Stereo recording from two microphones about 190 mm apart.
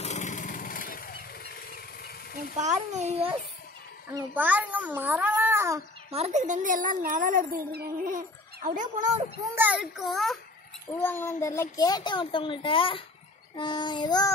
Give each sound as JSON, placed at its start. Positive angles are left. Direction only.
{"t": 0.0, "sound": "lawn mower", "side_deg": 40}
{"t": 2.5, "sound": "a child's voice", "side_deg": -35}
{"t": 4.1, "sound": "a child's voice", "side_deg": -15}
{"t": 6.1, "sound": "a woman's voice", "side_deg": -35}
{"t": 8.6, "sound": "a child's voice", "side_deg": -40}
{"t": 9.6, "sound": "a child's voice", "side_deg": -5}
{"t": 10.9, "sound": "a child's voice", "side_deg": 10}